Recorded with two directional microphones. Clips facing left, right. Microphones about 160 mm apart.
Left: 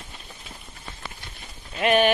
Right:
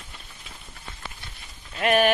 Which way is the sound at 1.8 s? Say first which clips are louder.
Left 1 dB; centre (ahead or behind).